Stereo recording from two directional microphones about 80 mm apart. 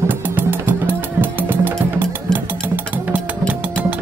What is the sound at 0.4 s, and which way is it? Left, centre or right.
Music, right.